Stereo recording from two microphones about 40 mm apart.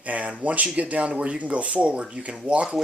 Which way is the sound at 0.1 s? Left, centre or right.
Right.